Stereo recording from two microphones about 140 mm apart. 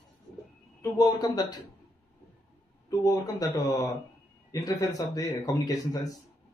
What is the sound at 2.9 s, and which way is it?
Speech, 25° left (ahead or behind).